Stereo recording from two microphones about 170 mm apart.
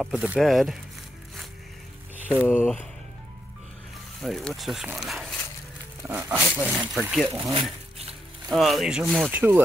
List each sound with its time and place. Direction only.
0.0 s speech: 5° right (ahead or behind)
2.1 s a sound: 10° right (ahead or behind)
2.4 s speech: 10° left (ahead or behind)
4.2 s speech: centre (ahead or behind)
6.0 s speech: 15° right (ahead or behind)
6.9 s speech: centre (ahead or behind)
7.3 s speech: 30° right (ahead or behind)
8.5 s speech: centre (ahead or behind)
9.3 s speech: 10° right (ahead or behind)